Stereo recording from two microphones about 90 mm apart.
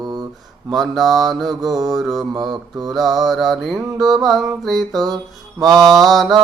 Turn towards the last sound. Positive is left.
turn(degrees=0)  # may be behind; listen again after turning